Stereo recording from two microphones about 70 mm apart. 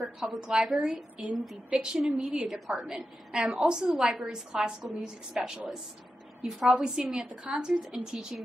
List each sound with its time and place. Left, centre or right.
0.0 s a woman's voice: centre
7.7 s a woman's voice: centre